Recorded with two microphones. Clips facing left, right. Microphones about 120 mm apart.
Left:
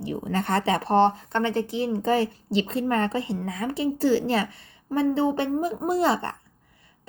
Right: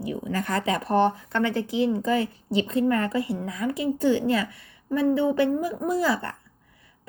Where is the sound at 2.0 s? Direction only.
30° left (ahead or behind).